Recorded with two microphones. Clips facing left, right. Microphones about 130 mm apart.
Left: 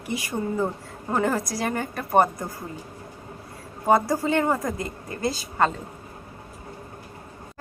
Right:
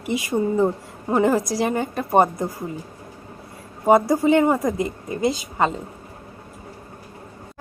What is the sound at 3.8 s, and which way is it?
Speech, 20° right (ahead or behind).